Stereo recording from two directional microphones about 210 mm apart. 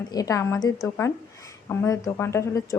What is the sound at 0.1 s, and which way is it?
Speech, 15° left (ahead or behind).